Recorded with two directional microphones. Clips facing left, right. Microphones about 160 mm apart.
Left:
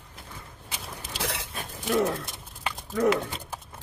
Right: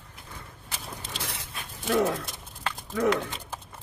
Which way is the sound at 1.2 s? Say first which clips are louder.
Left 9 dB; 90° left.